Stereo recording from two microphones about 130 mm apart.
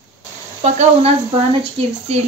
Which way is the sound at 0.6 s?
60° right (ahead or behind).